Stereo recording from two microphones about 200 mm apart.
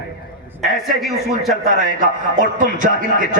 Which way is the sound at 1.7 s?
40° right (ahead or behind).